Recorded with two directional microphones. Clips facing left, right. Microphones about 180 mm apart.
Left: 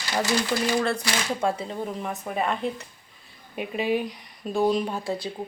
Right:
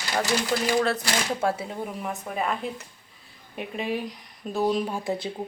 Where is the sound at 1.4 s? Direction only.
5° right (ahead or behind).